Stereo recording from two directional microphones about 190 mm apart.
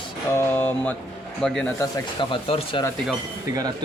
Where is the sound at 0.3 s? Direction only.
10° left (ahead or behind).